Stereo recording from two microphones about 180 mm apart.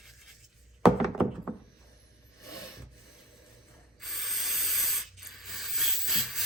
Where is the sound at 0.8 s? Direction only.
Centre (ahead or behind).